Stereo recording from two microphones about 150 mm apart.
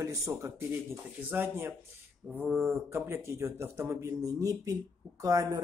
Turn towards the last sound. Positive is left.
turn(degrees=-25)  # may be behind; listen again after turning